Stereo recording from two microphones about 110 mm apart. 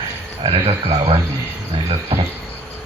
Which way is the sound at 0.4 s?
60° right (ahead or behind).